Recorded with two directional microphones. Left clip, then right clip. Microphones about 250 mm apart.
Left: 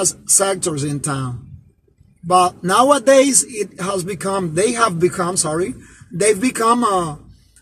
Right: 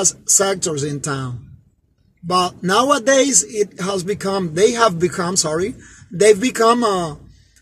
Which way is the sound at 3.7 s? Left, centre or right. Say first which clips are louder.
Right 1 dB; right.